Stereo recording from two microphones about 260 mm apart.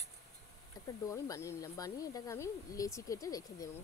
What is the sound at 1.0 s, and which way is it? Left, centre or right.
Speech, centre.